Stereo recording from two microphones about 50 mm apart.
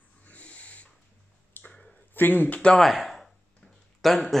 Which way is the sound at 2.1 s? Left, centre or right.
Left.